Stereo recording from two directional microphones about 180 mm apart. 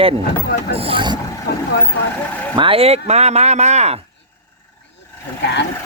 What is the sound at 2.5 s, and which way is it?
Speech, 30° right (ahead or behind).